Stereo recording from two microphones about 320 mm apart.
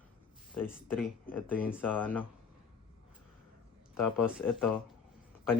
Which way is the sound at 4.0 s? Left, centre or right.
Left.